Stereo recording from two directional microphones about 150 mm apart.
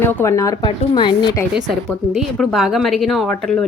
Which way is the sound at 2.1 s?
Centre (ahead or behind).